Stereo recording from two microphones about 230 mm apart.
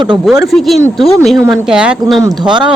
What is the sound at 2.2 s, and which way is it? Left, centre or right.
Speech, centre.